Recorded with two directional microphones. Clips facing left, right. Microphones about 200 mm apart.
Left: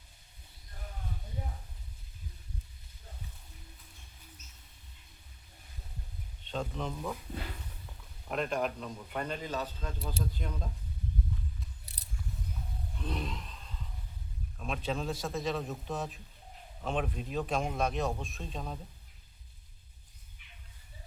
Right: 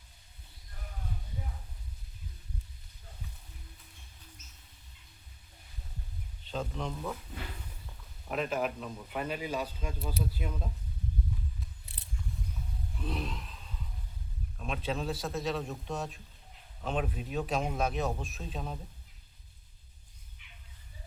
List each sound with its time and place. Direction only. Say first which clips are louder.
6.4 s speech: even; centre (ahead or behind)
8.3 s speech: even; 5° right (ahead or behind)
11.9 s scissors: right 1 dB; 40° left (ahead or behind)
13.0 s a sound: right 1 dB; centre (ahead or behind)
14.6 s speech: even; centre (ahead or behind)